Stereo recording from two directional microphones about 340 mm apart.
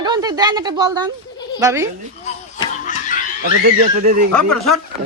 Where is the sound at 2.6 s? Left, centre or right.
Left.